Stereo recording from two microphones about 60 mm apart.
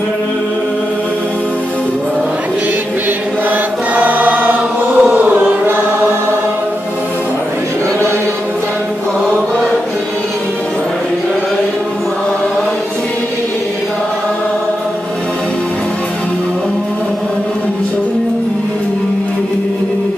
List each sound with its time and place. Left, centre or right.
3.9 s choir: right
5.0 s chant: right